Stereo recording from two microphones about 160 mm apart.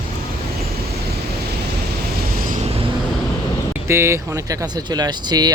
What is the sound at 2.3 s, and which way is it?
Vehicle, 55° right (ahead or behind).